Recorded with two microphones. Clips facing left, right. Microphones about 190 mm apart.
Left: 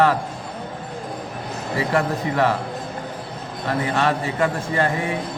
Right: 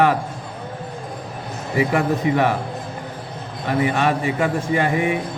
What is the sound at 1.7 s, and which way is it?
Speech, 15° right (ahead or behind).